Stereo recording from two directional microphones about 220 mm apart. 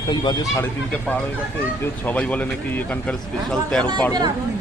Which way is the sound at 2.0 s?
5° left (ahead or behind).